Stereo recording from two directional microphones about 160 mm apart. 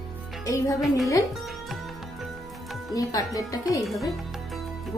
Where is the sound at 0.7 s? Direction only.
Centre (ahead or behind).